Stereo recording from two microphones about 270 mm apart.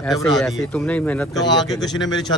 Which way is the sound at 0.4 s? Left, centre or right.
Centre.